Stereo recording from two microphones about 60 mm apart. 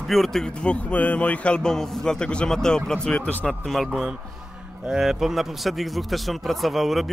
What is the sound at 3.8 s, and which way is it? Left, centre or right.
A man's voice, centre.